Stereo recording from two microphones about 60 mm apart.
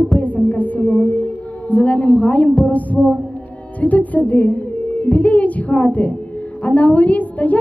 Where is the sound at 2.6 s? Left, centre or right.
Left.